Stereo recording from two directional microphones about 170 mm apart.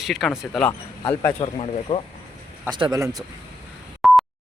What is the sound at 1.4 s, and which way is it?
Speech, 35° left (ahead or behind).